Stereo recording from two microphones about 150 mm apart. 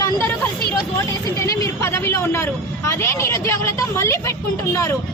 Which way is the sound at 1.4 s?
20° left (ahead or behind).